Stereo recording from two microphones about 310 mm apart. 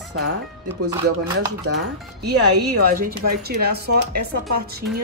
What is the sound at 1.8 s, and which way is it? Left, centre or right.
Speech, right.